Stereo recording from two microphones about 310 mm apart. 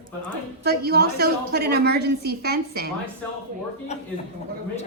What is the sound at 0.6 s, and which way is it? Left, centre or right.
A woman's voice, right.